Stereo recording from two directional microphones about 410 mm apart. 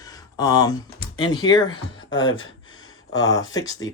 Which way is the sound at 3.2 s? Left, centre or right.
Centre.